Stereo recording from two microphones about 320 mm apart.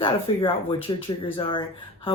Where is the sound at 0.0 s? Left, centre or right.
Centre.